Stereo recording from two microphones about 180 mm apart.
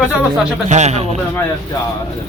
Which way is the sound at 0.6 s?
40° right (ahead or behind).